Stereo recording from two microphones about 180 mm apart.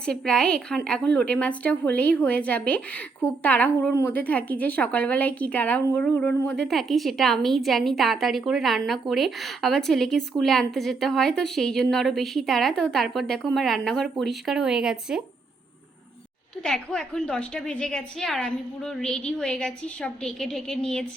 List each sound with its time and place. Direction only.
0.0 s a woman's voice: 5° left (ahead or behind)
16.6 s a woman's voice: 5° left (ahead or behind)